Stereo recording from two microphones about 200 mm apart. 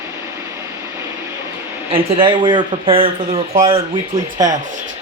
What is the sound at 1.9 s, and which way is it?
A man's voice, 25° right (ahead or behind).